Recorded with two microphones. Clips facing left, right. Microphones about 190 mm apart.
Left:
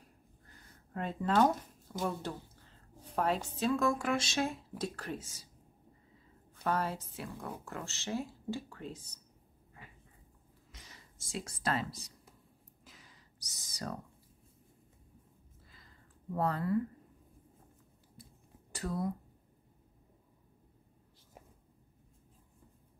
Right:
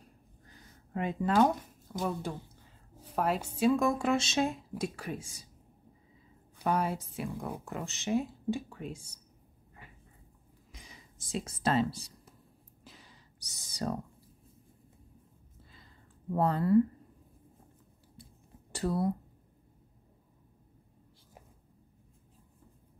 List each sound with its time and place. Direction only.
1.2 s speech: centre (ahead or behind)
6.5 s speech: 10° right (ahead or behind)
10.7 s speech: 10° right (ahead or behind); by 12.1 s 30° right (ahead or behind)
12.8 s a sound: 30° right (ahead or behind)
16.3 s speech: 25° right (ahead or behind)
18.7 s speech: 30° right (ahead or behind)